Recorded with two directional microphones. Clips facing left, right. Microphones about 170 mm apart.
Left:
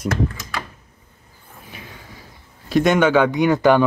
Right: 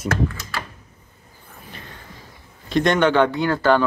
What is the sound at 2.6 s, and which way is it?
Speech, 5° left (ahead or behind).